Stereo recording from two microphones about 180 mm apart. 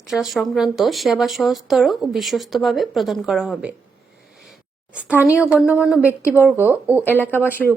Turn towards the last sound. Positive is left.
turn(degrees=10)  # may be behind; listen again after turning